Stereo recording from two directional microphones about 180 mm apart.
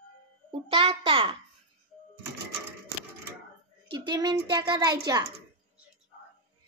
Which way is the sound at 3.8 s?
25° right (ahead or behind).